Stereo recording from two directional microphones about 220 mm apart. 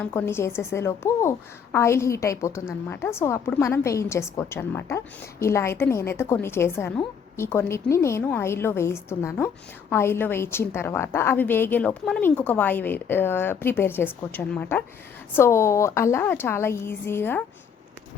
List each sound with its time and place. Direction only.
0.0 s a woman's voice: 10° left (ahead or behind)